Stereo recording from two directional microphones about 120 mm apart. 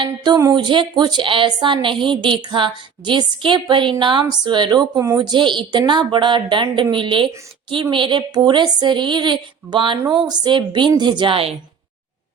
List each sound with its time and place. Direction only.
0.0 s a woman's voice: 30° right (ahead or behind); by 11.5 s 50° right (ahead or behind)